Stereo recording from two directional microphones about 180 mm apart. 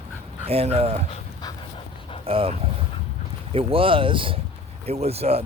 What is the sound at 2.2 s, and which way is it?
Speech, 30° right (ahead or behind).